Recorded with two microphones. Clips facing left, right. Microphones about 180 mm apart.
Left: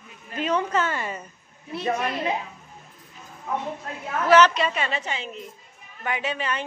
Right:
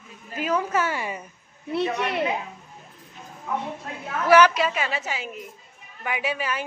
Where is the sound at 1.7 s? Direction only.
65° right (ahead or behind).